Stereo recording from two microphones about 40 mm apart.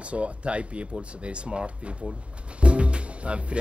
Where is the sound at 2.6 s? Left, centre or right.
Right.